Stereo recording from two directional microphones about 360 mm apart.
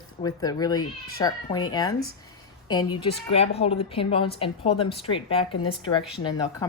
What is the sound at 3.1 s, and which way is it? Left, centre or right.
Speech, centre.